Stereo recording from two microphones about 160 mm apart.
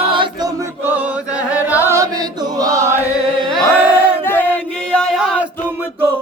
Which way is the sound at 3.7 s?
10° right (ahead or behind).